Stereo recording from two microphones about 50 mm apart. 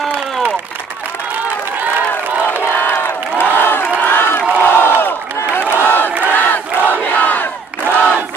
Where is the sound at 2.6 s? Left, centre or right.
Left.